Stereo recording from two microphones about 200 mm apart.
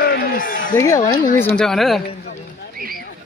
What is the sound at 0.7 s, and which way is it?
Speech, 15° left (ahead or behind).